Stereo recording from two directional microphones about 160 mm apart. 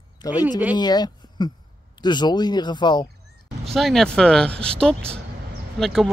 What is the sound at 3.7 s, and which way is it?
Speech, centre (ahead or behind).